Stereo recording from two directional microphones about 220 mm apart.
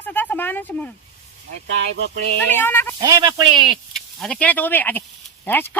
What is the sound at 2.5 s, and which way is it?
Speech, 10° left (ahead or behind).